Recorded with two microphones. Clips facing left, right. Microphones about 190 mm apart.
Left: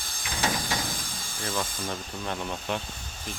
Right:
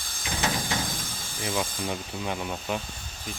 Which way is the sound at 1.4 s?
10° right (ahead or behind).